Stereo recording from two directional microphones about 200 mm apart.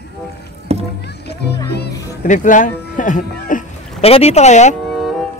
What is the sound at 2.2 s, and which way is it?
Speech, 40° left (ahead or behind).